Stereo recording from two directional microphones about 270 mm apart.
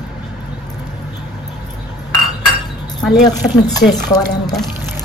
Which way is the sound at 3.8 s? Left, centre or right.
Left.